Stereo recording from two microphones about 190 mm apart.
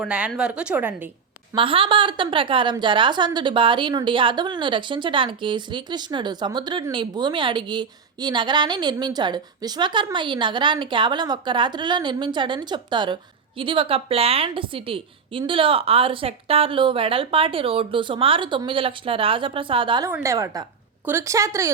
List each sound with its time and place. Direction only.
0.0 s a woman's voice: 5° right (ahead or behind)
1.5 s a woman's voice: 25° right (ahead or behind)
20.1 s a woman's voice: 15° right (ahead or behind)